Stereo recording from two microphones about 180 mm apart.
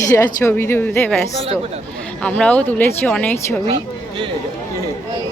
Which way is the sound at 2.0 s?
5° left (ahead or behind).